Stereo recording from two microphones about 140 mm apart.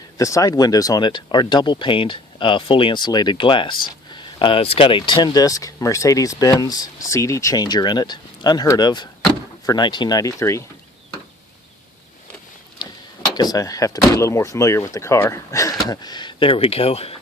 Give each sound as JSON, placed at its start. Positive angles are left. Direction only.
{"t": 0.2, "sound": "speech", "side_deg": 25}
{"t": 12.8, "sound": "a sound", "side_deg": 30}
{"t": 13.3, "sound": "speech", "side_deg": 25}